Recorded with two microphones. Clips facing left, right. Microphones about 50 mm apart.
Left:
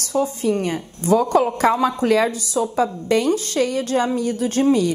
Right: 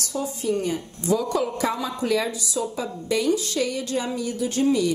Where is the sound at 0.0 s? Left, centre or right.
Left.